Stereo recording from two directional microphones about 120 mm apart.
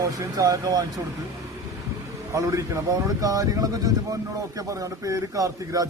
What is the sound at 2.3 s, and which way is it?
Speech, 25° right (ahead or behind).